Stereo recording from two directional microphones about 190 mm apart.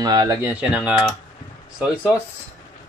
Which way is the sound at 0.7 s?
5° right (ahead or behind).